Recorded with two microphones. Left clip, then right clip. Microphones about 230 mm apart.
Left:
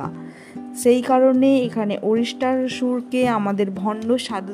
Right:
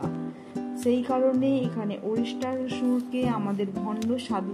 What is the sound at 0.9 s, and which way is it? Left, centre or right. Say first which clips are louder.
Speech: left 9 dB; left.